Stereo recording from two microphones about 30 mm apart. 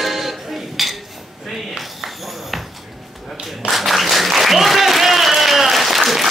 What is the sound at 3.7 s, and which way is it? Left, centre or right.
Applause, centre.